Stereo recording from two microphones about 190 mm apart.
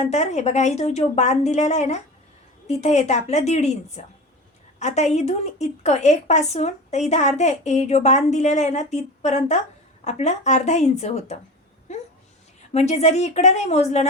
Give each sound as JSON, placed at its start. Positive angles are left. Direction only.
{"t": 0.0, "sound": "a woman's voice", "side_deg": 35}
{"t": 11.9, "sound": "a sound", "side_deg": 35}
{"t": 12.7, "sound": "a woman's voice", "side_deg": 35}